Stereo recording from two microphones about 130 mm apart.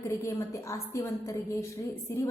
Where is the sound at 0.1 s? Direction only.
20° left (ahead or behind).